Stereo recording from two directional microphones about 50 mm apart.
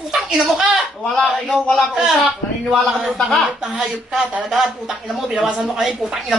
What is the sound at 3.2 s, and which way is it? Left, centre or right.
Speech, centre.